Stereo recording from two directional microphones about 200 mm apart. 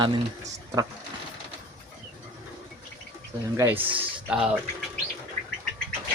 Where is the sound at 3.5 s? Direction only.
10° right (ahead or behind).